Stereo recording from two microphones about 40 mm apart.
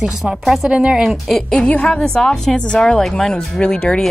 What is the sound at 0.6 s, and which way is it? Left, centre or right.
Speech, right.